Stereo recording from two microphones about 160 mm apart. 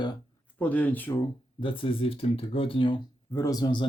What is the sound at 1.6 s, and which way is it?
Speech, 30° left (ahead or behind).